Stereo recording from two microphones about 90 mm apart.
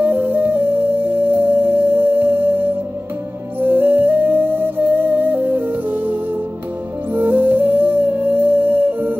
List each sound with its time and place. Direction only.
0.0 s music: 20° right (ahead or behind)
7.2 s music: 20° right (ahead or behind)